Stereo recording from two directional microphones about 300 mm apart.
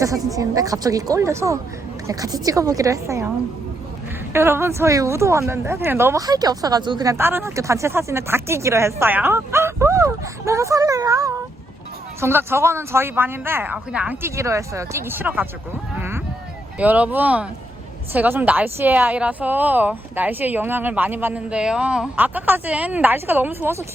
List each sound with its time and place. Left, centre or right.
0.0 s a woman's voice: centre
4.3 s a woman's voice: centre
16.0 s a sound: centre
16.7 s a woman's voice: centre